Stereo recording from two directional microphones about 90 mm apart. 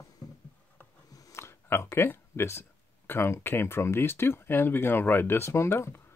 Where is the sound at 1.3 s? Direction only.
30° left (ahead or behind).